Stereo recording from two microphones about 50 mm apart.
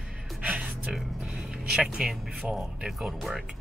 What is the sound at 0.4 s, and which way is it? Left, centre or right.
Music, right.